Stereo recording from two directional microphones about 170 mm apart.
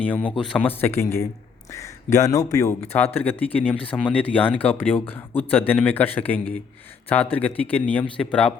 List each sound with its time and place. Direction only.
0.0 s speech: 10° left (ahead or behind)